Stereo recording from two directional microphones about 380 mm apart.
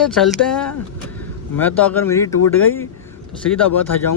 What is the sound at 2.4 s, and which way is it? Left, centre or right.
Speech, left.